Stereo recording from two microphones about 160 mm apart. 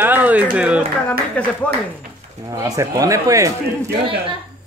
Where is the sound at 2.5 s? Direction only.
20° right (ahead or behind).